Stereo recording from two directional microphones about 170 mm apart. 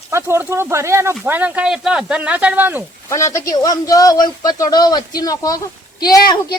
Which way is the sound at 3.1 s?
15° left (ahead or behind).